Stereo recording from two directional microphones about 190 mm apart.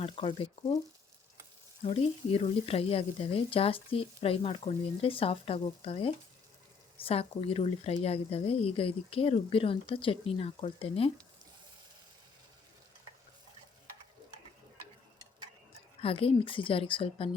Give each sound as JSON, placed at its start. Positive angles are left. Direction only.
{"t": 0.0, "sound": "speech", "side_deg": 30}
{"t": 1.8, "sound": "speech", "side_deg": 30}
{"t": 16.0, "sound": "speech", "side_deg": 30}